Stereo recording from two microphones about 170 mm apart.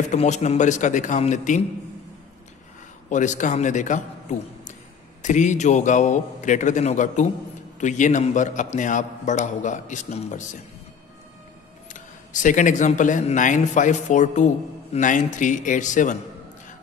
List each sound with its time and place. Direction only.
0.1 s speech: 40° left (ahead or behind)
3.1 s a man's voice: 45° left (ahead or behind)
11.9 s speech: 50° left (ahead or behind)